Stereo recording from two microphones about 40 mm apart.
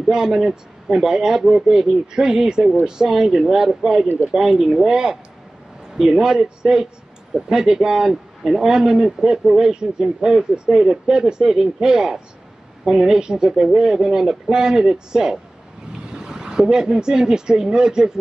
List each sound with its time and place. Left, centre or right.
0.1 s speech: centre